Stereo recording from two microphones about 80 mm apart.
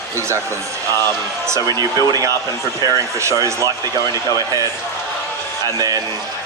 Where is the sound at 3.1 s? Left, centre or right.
Right.